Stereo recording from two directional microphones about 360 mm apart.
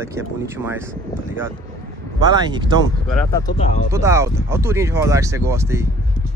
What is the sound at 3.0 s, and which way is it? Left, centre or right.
Speech, centre.